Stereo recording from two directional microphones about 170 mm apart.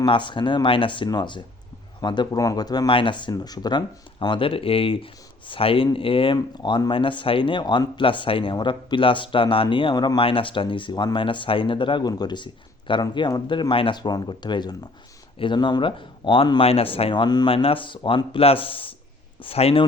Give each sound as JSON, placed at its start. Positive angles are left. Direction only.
{"t": 0.0, "sound": "speech", "side_deg": 30}